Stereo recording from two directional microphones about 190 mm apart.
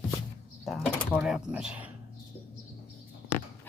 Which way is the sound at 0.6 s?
Centre (ahead or behind).